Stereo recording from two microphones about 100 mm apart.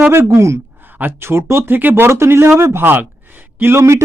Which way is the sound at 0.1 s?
25° right (ahead or behind).